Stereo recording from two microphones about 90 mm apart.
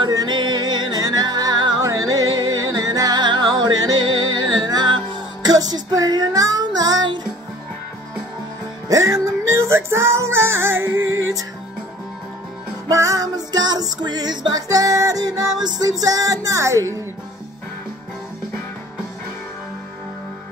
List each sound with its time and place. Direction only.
0.1 s music: 50° right (ahead or behind)
1.8 s music: 40° right (ahead or behind)
8.8 s music: 40° right (ahead or behind)
12.9 s music: 35° right (ahead or behind)
15.6 s speech: 45° right (ahead or behind)